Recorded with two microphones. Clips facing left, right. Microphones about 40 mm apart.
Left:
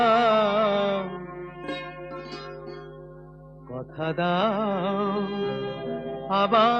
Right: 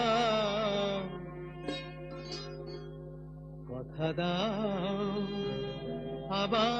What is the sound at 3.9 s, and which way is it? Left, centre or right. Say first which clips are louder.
Music: left 8 dB; left.